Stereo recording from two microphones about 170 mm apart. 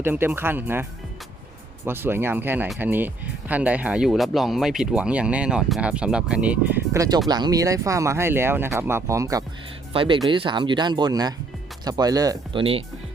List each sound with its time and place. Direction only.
0.0 s speech: 10° right (ahead or behind)
9.9 s speech: 30° right (ahead or behind)